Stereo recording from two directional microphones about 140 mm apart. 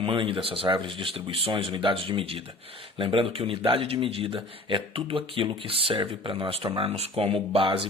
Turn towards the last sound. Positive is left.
turn(degrees=-40)  # may be behind; listen again after turning